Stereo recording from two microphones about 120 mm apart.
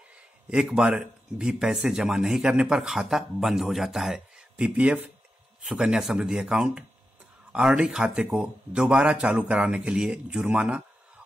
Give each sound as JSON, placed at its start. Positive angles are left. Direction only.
{"t": 0.5, "sound": "speech", "side_deg": -5}